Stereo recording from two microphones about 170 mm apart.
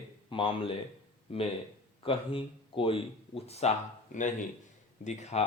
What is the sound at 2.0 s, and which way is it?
Speech, 30° left (ahead or behind).